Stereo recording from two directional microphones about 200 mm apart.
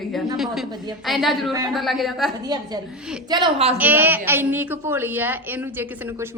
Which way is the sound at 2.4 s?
20° right (ahead or behind).